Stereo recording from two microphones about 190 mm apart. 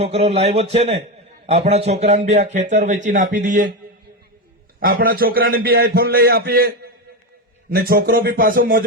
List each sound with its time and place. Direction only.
0.0 s a man's voice: 30° right (ahead or behind)
4.8 s a man's voice: 50° right (ahead or behind)